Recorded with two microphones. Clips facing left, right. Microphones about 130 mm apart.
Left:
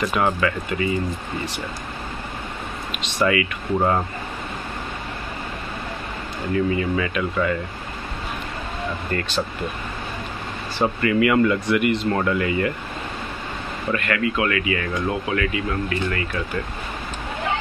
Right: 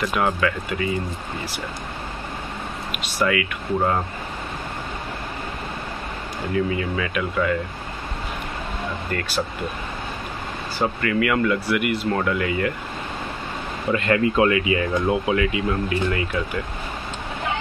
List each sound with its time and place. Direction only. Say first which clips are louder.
0.1 s speech: left 1 dB; centre (ahead or behind)
2.9 s speech: left 2 dB; 5° right (ahead or behind)
6.5 s speech: left 2 dB; centre (ahead or behind)
9.1 s speech: left 2 dB; centre (ahead or behind)
10.8 s speech: left 3 dB; 5° left (ahead or behind)
13.9 s speech: right 5 dB; 30° right (ahead or behind)